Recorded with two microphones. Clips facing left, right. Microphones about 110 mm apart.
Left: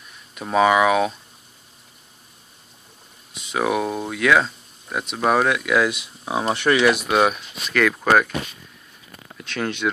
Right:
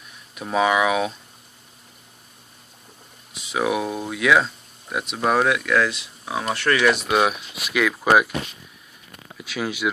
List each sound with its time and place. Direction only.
0.3 s speech: centre (ahead or behind)
3.3 s speech: centre (ahead or behind)
5.8 s speech: 15° left (ahead or behind)
6.9 s speech: centre (ahead or behind)
9.3 s speech: 5° right (ahead or behind)